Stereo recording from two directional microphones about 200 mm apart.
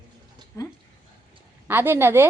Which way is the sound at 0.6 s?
15° left (ahead or behind).